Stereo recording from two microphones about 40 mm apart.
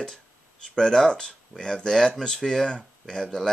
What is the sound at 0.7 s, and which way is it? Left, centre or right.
Speech, centre.